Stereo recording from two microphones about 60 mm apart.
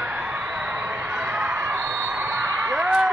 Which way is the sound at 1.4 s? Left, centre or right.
Right.